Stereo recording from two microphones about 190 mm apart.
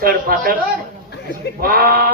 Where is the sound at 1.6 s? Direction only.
50° right (ahead or behind).